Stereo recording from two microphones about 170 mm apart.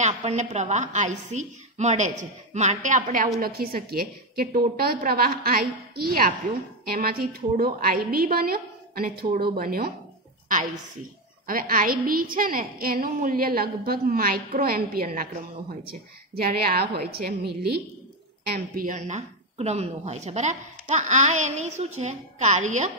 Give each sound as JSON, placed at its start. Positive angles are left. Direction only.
{"t": 0.0, "sound": "a woman's voice", "side_deg": -40}
{"t": 3.3, "sound": "a woman's voice", "side_deg": -60}
{"t": 11.4, "sound": "a woman's voice", "side_deg": -55}
{"t": 18.5, "sound": "a woman's voice", "side_deg": -55}